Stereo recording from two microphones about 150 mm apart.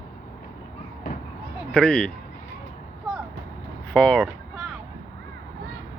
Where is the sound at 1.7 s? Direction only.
5° left (ahead or behind).